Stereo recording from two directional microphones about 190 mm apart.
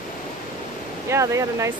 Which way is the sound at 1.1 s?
15° right (ahead or behind).